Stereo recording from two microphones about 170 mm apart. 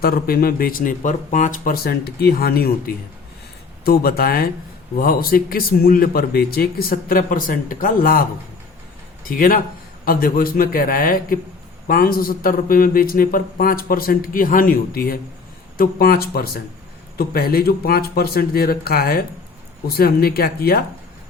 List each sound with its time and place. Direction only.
0.0 s speech: 60° left (ahead or behind)
9.2 s speech: 55° left (ahead or behind)